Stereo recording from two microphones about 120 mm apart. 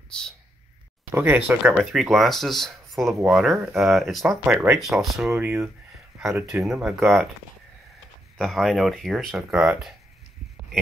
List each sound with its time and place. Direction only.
1.1 s speech: 15° right (ahead or behind)
1.8 s speech: centre (ahead or behind)
5.2 s speech: 15° right (ahead or behind)
6.6 s speech: 5° right (ahead or behind)
8.4 s speech: centre (ahead or behind)